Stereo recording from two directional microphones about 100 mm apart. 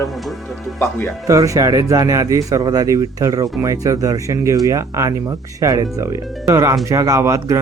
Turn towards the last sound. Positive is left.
turn(degrees=-30)  # may be behind; listen again after turning